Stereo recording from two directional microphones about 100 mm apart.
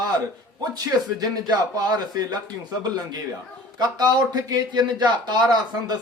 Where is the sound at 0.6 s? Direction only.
40° right (ahead or behind).